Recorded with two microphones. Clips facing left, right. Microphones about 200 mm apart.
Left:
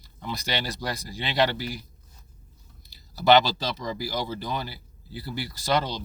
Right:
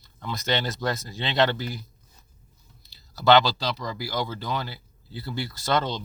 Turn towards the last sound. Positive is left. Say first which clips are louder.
# even
turn(degrees=15)  # may be behind; listen again after turning